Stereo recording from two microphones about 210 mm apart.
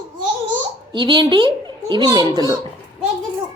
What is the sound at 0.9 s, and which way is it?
A child's voice, 20° right (ahead or behind).